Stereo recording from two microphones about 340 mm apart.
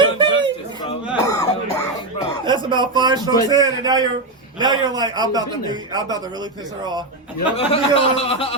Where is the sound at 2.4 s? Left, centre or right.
Centre.